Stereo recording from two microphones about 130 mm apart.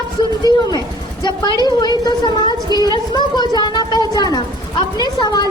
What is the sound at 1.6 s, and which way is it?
A woman's voice, 30° left (ahead or behind).